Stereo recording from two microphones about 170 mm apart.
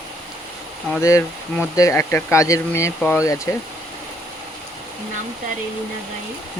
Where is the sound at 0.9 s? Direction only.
15° left (ahead or behind).